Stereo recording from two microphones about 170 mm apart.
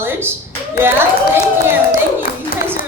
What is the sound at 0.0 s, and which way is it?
Clapping, 15° right (ahead or behind).